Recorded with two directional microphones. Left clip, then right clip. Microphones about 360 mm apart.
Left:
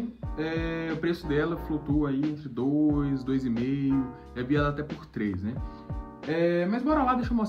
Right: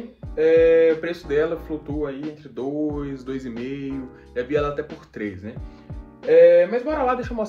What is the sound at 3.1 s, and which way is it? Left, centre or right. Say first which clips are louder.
Speech: left 1 dB; centre.